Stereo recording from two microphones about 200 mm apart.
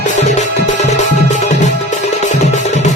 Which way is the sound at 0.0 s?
35° left (ahead or behind).